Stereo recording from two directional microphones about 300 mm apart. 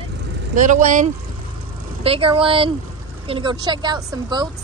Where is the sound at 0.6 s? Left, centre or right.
Right.